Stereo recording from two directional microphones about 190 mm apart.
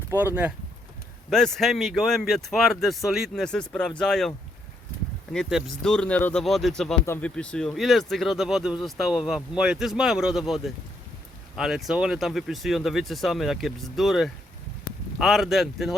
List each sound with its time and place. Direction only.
0.1 s speech: 10° right (ahead or behind)
1.3 s speech: 5° left (ahead or behind)
5.3 s speech: centre (ahead or behind)
14.9 s a sound: 50° left (ahead or behind)
15.2 s speech: centre (ahead or behind)